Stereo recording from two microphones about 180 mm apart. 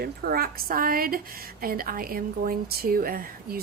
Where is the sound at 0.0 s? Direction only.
55° right (ahead or behind).